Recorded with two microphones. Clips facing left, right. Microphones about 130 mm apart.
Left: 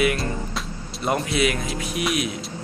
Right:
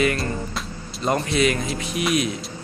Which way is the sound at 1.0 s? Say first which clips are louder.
Right 2 dB; 5° left (ahead or behind).